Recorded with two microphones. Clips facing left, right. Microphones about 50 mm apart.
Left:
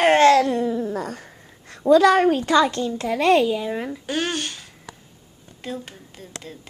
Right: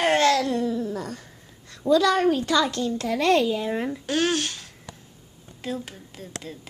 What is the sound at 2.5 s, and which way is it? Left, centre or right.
Speech, left.